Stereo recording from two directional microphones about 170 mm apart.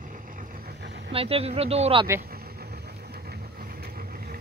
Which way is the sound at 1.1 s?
35° right (ahead or behind).